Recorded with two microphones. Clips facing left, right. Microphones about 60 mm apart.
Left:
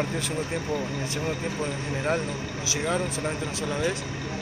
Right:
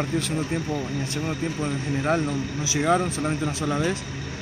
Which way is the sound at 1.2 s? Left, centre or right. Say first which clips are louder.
Right 2 dB; centre.